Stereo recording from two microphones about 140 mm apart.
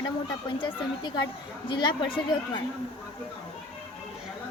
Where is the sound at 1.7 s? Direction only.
35° left (ahead or behind).